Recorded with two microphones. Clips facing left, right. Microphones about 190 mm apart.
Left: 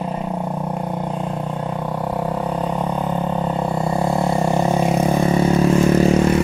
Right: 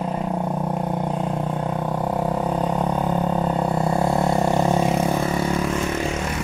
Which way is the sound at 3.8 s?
Centre (ahead or behind).